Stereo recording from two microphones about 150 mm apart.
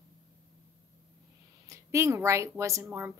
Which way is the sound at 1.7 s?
20° right (ahead or behind).